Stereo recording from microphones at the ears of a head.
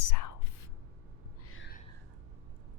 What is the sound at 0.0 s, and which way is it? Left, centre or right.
Whispering, left.